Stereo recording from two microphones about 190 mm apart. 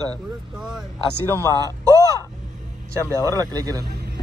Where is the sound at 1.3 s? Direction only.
15° left (ahead or behind).